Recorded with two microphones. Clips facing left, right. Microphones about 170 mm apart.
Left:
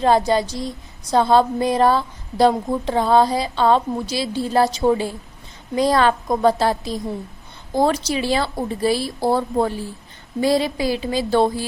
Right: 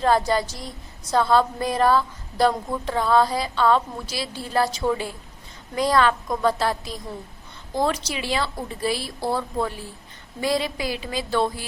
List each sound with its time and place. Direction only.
0.0 s a woman's voice: 20° left (ahead or behind)